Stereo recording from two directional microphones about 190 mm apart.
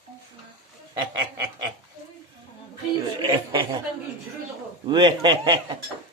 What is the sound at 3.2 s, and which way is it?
Speech, 25° right (ahead or behind).